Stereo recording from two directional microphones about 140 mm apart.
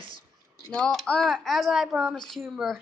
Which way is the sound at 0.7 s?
5° left (ahead or behind).